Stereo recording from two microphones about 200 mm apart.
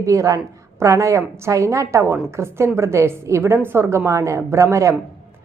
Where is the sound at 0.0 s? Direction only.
15° right (ahead or behind).